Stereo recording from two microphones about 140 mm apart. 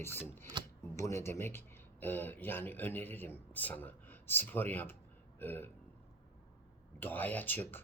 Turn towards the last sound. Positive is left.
turn(degrees=15)  # may be behind; listen again after turning